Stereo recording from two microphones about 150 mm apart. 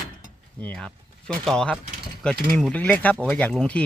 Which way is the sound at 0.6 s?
10° left (ahead or behind).